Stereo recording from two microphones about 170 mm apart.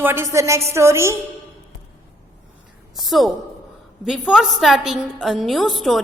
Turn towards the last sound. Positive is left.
turn(degrees=0)  # may be behind; listen again after turning